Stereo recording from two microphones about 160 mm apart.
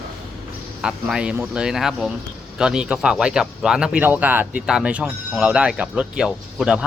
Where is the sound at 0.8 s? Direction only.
5° right (ahead or behind).